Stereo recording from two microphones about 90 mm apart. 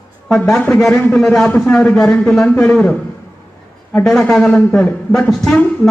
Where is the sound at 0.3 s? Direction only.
10° left (ahead or behind).